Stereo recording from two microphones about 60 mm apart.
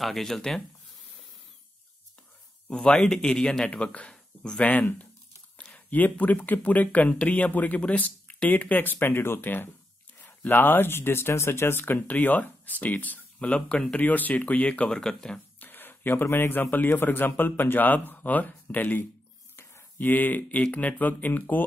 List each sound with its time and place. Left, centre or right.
0.0 s speech: centre
2.7 s speech: centre
15.0 s speech: centre
15.6 s a sound: left
16.7 s speech: left
19.5 s a sound: left
20.0 s speech: left